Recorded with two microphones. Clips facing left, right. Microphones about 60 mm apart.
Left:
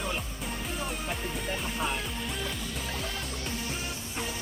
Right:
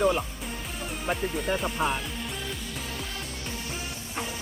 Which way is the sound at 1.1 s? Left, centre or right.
Centre.